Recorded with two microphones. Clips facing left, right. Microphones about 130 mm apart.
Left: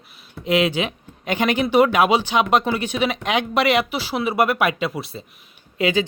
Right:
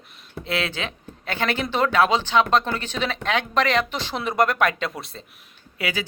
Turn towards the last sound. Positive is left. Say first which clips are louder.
# left 8 dB
turn(degrees=25)  # may be behind; listen again after turning